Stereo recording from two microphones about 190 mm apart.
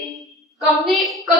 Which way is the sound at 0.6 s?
Centre (ahead or behind).